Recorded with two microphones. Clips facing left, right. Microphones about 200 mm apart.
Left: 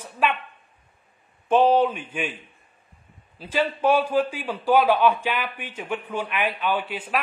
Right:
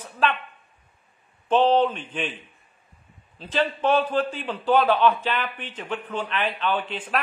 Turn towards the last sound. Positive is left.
turn(degrees=10)  # may be behind; listen again after turning